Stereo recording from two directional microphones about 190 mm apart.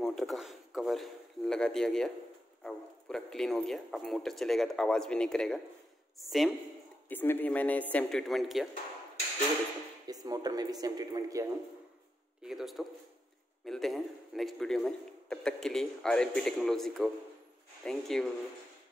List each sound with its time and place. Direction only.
0.0 s a man's voice: centre (ahead or behind)
7.1 s a man's voice: 10° left (ahead or behind)
10.0 s speech: 20° right (ahead or behind)
12.4 s a man's voice: centre (ahead or behind)